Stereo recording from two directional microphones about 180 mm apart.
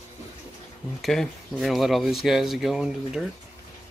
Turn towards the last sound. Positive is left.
turn(degrees=-5)  # may be behind; listen again after turning